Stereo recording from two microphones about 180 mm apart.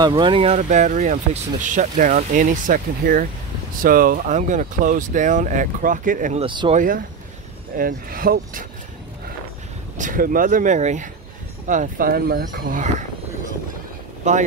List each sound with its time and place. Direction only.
0.0 s speech: 25° right (ahead or behind)
0.6 s speech: 45° right (ahead or behind)
6.4 s speech: 25° right (ahead or behind)
6.7 s speech: 50° right (ahead or behind)
9.9 s speech: 50° right (ahead or behind)
14.2 s speech: 40° right (ahead or behind)